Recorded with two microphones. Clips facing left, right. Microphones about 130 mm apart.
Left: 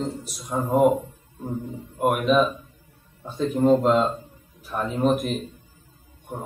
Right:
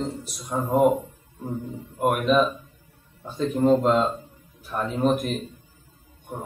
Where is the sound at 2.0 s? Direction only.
5° left (ahead or behind).